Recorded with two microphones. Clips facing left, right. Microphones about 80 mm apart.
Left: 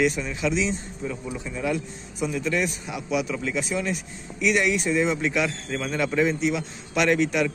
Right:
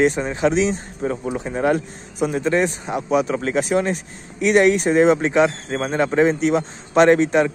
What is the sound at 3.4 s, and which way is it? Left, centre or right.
Speech, right.